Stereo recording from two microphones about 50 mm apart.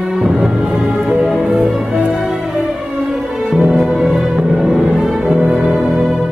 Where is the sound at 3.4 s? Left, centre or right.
Centre.